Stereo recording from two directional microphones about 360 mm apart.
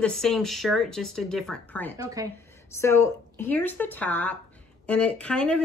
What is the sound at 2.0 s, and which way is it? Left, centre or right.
Speech, centre.